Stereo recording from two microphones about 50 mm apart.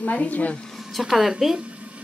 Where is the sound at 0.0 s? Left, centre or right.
Left.